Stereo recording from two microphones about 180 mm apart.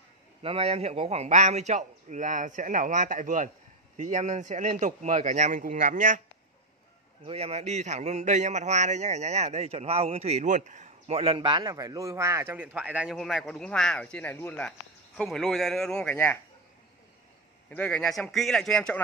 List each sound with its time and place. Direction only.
0.4 s a man's voice: 30° right (ahead or behind)
7.2 s a man's voice: 35° right (ahead or behind); by 16.3 s 10° left (ahead or behind)
17.6 s a man's voice: 5° left (ahead or behind)